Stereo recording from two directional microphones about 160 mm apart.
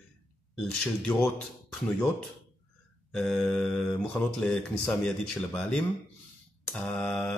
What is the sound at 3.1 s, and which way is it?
Speech, 5° left (ahead or behind).